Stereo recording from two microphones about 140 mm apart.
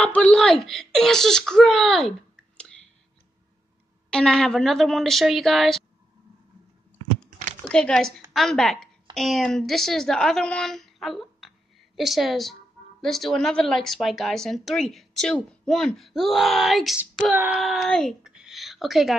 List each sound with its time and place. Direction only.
0.0 s speech: 10° left (ahead or behind)
4.1 s a woman's voice: 5° left (ahead or behind)
7.2 s a sound: 60° right (ahead or behind)
7.6 s a woman's voice: 5° left (ahead or behind)
17.3 s a sound: 10° right (ahead or behind)
17.6 s speech: centre (ahead or behind)